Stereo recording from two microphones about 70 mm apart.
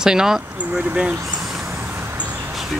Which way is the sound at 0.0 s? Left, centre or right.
Centre.